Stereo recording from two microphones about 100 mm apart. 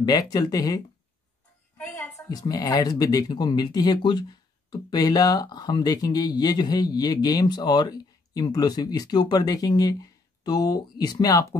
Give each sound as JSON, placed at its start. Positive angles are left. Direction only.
{"t": 0.0, "sound": "speech", "side_deg": 40}
{"t": 2.1, "sound": "speech", "side_deg": 40}